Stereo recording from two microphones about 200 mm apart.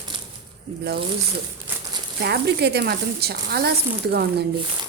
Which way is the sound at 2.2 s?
55° right (ahead or behind).